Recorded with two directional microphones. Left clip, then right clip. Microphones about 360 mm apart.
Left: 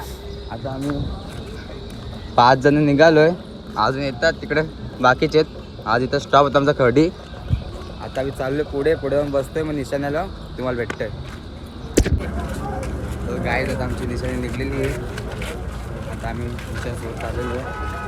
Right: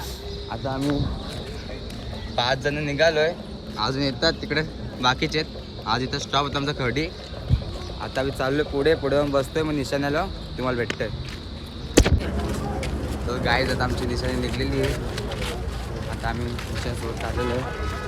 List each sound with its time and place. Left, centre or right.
0.5 s speech: centre
2.4 s speech: centre
2.8 s speech: left
3.8 s speech: centre
8.1 s speech: centre
13.3 s speech: centre